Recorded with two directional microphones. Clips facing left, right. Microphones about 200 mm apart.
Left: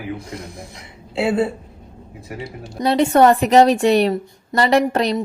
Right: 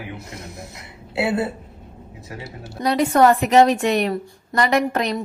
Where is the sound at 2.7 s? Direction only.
25° left (ahead or behind).